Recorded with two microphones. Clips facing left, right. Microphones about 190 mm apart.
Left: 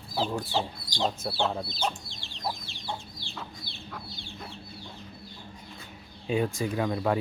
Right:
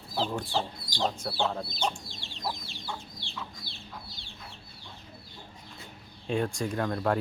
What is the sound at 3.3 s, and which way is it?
Chicken, 60° left (ahead or behind).